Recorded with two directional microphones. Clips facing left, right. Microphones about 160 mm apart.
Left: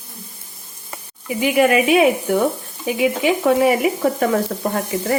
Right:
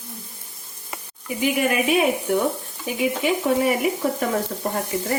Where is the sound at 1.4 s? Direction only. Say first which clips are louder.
Left 6 dB; 90° left.